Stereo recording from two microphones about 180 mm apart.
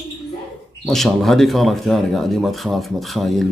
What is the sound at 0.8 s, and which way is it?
Speech, centre (ahead or behind).